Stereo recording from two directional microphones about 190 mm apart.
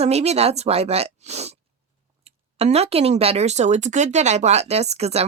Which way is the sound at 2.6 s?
35° right (ahead or behind).